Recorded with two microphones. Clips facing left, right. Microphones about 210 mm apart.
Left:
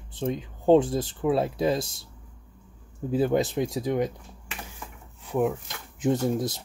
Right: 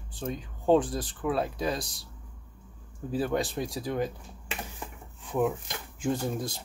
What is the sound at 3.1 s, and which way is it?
Speech, 25° left (ahead or behind).